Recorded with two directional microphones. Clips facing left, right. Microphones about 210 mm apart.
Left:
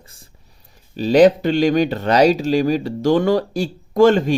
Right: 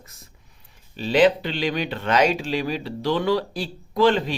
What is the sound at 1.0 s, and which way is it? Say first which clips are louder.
Speech: left 6 dB; 45° left (ahead or behind).